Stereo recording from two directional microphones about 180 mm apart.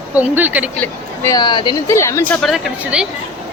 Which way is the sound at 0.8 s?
20° left (ahead or behind).